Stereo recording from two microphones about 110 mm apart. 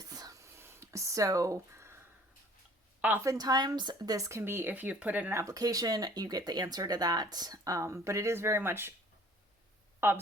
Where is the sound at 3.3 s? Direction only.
35° right (ahead or behind); by 5.4 s 15° right (ahead or behind).